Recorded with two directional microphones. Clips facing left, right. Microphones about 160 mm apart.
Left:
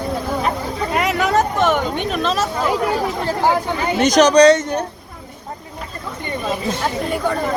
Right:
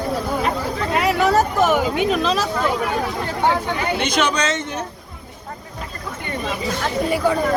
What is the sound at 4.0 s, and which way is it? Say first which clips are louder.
Speech: left 13 dB; 40° left (ahead or behind).